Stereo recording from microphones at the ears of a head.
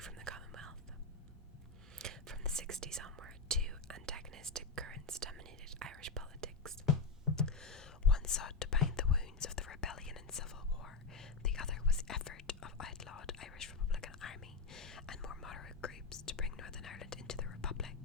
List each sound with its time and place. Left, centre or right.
0.0 s whispering: right
2.0 s whispering: right
6.8 s whispering: left